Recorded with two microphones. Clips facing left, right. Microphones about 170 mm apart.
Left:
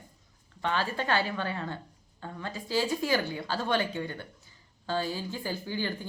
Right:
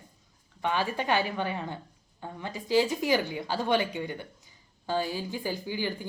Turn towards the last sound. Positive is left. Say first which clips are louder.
# right 1 dB
turn(degrees=-15)  # may be behind; listen again after turning